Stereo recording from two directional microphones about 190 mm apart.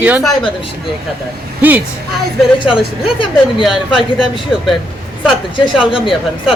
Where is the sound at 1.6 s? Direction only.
10° right (ahead or behind).